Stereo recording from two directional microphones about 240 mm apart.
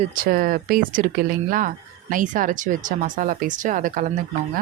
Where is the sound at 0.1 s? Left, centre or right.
Right.